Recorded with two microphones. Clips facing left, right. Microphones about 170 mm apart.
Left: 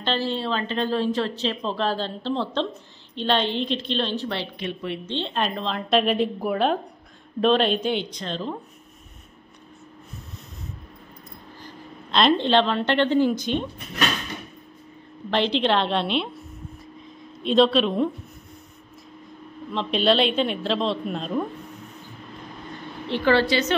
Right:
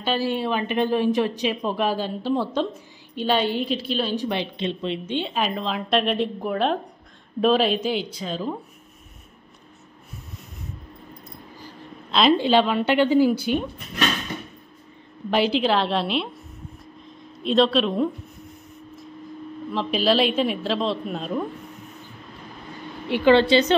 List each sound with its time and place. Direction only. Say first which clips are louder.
0.0 s a woman's voice: right 2 dB; 10° right (ahead or behind)
11.6 s a woman's voice: even; 5° right (ahead or behind)
15.3 s a woman's voice: right 1 dB; 5° right (ahead or behind)
17.4 s a woman's voice: left 1 dB; centre (ahead or behind)
19.7 s a woman's voice: even; 5° right (ahead or behind)
23.0 s a woman's voice: right 4 dB; 15° right (ahead or behind)